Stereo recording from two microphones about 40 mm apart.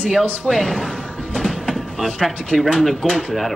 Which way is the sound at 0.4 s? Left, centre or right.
Centre.